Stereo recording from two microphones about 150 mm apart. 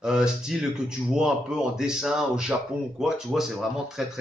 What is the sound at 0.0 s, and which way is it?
Speech, 5° right (ahead or behind).